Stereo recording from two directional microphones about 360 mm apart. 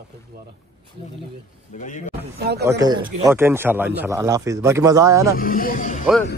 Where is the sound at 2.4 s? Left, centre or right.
Right.